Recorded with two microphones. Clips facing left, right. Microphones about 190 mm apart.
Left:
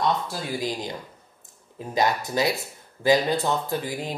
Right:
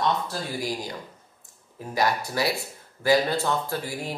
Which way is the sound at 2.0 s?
20° left (ahead or behind).